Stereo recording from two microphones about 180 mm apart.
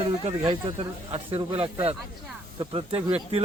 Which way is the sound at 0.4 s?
30° right (ahead or behind).